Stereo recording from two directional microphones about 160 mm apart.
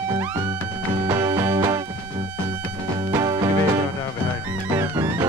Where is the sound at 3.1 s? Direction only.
25° right (ahead or behind).